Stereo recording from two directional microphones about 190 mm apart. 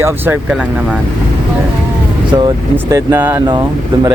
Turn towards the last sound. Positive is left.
turn(degrees=-25)  # may be behind; listen again after turning